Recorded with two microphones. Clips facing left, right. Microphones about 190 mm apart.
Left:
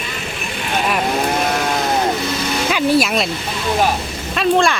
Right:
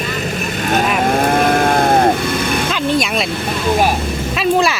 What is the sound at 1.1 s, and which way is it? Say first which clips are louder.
Sheep: right 5 dB; 50° right (ahead or behind).